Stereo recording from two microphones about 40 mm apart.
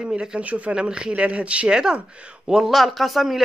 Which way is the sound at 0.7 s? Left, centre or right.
Right.